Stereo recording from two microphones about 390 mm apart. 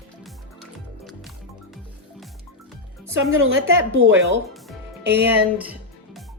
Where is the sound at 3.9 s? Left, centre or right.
Right.